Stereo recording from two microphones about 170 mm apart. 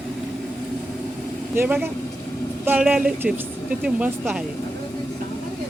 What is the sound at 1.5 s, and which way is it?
Speech, 10° right (ahead or behind).